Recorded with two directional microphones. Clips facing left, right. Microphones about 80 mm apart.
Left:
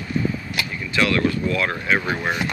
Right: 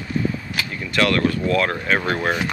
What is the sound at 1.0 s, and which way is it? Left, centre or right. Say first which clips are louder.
Speech: right 1 dB; right.